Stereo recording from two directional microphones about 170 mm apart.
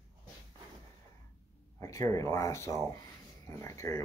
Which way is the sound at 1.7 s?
20° left (ahead or behind).